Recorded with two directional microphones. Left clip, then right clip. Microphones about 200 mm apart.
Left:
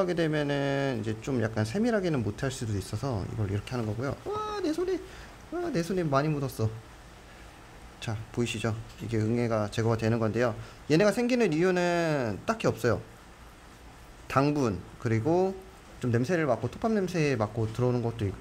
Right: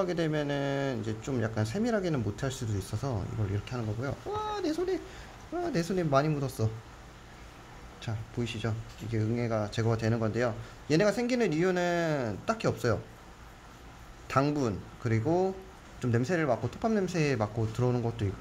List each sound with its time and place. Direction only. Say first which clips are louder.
0.0 s speech: left 2 dB; 15° left (ahead or behind)
8.0 s speech: left 5 dB; 25° left (ahead or behind)
14.2 s speech: left 2 dB; 15° left (ahead or behind)